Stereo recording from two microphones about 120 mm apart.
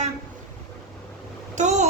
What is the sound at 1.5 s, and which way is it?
Speech, 85° right.